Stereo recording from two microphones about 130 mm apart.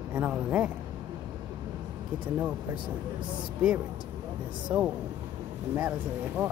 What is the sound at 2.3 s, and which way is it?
Speech, 10° right (ahead or behind).